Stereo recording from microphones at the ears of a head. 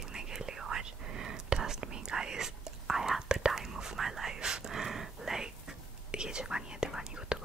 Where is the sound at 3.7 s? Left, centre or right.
Right.